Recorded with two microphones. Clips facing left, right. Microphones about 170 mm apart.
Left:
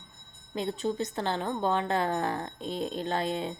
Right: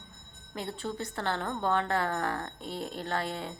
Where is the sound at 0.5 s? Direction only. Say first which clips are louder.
Left 6 dB; 20° left (ahead or behind).